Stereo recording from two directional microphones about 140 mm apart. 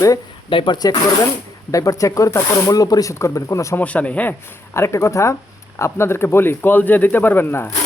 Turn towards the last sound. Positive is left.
turn(degrees=15)  # may be behind; listen again after turning